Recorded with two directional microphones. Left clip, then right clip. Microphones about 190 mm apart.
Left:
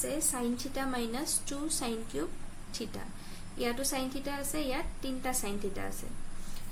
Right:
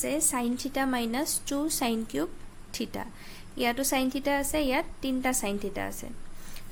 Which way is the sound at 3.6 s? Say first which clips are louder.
Right 6 dB; 50° right (ahead or behind).